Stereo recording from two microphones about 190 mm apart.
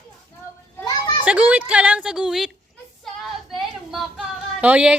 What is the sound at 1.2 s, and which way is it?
A woman's voice, 5° right (ahead or behind).